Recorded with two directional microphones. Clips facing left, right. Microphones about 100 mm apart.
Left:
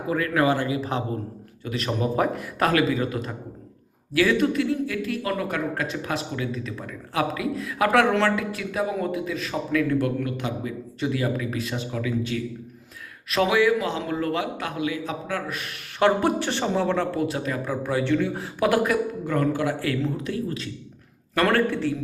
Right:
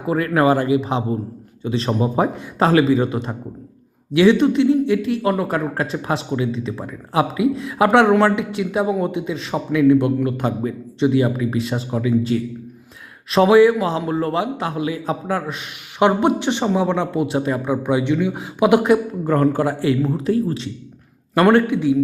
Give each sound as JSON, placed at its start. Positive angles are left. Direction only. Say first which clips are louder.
{"t": 0.1, "sound": "a man's voice", "louder": "right 6 dB", "side_deg": -30}
{"t": 10.3, "sound": "speech", "louder": "right 7 dB", "side_deg": -40}
{"t": 11.0, "sound": "a man's voice", "louder": "right 8 dB", "side_deg": -25}
{"t": 19.2, "sound": "a man's voice", "louder": "right 6 dB", "side_deg": -40}
{"t": 21.7, "sound": "speech", "louder": "right 8 dB", "side_deg": -15}